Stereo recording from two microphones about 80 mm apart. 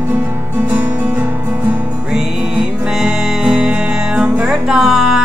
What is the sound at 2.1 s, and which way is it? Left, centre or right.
Music, centre.